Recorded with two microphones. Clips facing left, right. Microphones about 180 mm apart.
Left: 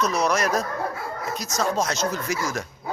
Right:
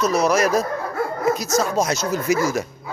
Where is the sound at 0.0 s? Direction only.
5° right (ahead or behind).